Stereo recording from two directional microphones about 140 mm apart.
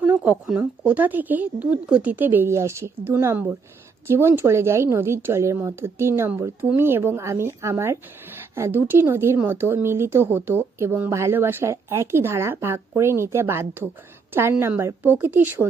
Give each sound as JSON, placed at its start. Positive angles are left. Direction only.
{"t": 0.0, "sound": "speech", "side_deg": -10}